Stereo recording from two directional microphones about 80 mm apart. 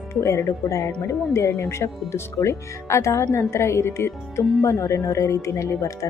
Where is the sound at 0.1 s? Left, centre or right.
Left.